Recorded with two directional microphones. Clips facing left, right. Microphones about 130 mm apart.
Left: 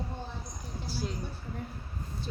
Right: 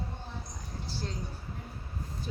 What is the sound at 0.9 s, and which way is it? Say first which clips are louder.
Speech: left 3 dB; 10° left (ahead or behind).